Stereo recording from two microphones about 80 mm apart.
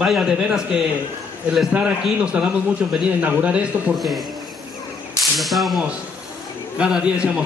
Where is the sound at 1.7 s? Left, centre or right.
Centre.